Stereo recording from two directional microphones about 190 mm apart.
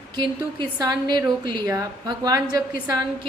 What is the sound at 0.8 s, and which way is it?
A woman's voice, 20° right (ahead or behind).